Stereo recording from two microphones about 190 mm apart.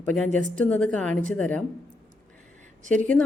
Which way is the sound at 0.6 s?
5° left (ahead or behind).